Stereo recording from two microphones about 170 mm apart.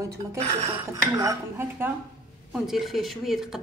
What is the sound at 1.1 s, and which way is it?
Speech, 15° right (ahead or behind).